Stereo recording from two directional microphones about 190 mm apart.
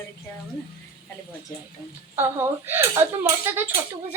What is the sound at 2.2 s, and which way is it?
Speech, 10° right (ahead or behind).